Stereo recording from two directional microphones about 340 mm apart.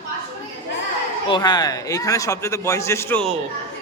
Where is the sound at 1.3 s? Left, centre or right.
Centre.